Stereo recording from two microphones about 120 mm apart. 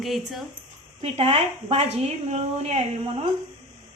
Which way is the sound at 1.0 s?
60° right (ahead or behind).